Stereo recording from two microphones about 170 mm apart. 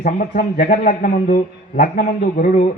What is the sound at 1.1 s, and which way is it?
Mantra, 55° left (ahead or behind).